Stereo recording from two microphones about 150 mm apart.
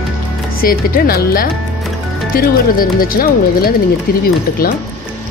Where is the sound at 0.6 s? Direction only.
75° left (ahead or behind).